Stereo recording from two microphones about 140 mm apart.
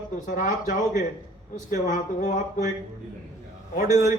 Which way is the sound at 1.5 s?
70° left (ahead or behind).